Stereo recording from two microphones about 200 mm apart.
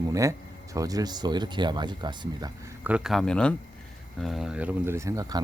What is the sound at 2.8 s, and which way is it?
Speech, 5° right (ahead or behind).